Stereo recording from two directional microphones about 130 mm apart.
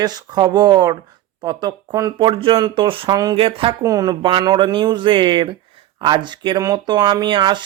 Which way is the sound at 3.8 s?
25° right (ahead or behind).